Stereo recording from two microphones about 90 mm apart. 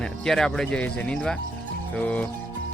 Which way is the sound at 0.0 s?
5° left (ahead or behind).